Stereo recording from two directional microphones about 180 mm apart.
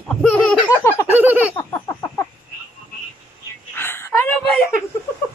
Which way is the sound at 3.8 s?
10° left (ahead or behind).